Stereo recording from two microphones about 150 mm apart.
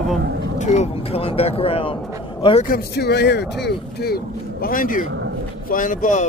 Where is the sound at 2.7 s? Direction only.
90° left.